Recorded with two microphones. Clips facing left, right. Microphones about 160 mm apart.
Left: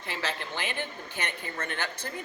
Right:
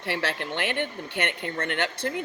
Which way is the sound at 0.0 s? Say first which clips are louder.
Right 5 dB; 65° right (ahead or behind).